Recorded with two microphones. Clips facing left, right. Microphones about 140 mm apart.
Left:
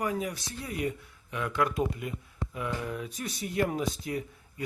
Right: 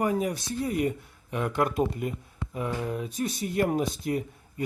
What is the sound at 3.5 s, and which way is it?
Speech, 40° right (ahead or behind).